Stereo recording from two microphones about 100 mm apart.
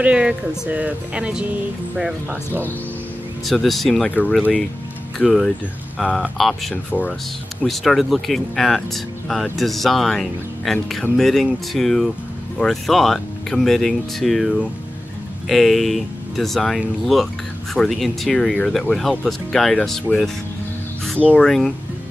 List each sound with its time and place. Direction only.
0.0 s speech: 10° right (ahead or behind)
3.4 s speech: centre (ahead or behind)
5.2 s speech: centre (ahead or behind)
6.9 s speech: 15° left (ahead or behind)
7.6 s speech: centre (ahead or behind)